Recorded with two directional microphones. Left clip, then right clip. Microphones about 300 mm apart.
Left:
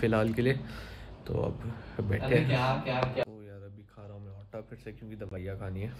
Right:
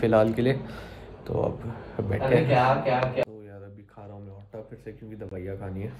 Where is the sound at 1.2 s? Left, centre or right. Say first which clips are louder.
Right 6 dB; centre.